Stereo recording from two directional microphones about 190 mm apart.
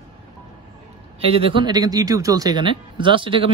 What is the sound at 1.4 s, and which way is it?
Speech, 25° right (ahead or behind).